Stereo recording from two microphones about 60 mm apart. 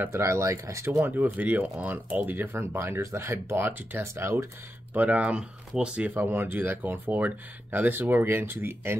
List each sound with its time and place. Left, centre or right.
0.1 s speech: right
1.1 s speech: right
4.0 s speech: right
4.9 s speech: right
6.1 s speech: right